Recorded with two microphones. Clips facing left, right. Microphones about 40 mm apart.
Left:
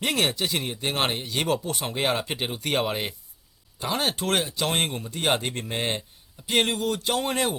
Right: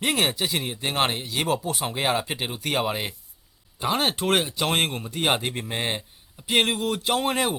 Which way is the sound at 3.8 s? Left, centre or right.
Centre.